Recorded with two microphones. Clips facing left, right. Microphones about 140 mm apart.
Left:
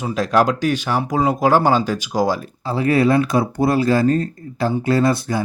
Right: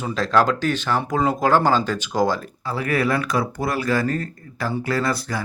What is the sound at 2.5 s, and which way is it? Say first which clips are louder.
Speech: left 6 dB; 25° left (ahead or behind).